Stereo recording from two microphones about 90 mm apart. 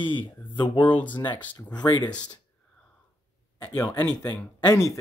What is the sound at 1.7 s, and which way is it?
Speech, 50° left (ahead or behind).